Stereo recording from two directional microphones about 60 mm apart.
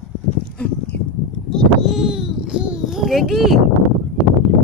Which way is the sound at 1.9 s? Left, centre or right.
Centre.